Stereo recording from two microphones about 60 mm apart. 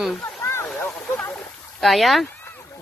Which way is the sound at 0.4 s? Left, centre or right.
Left.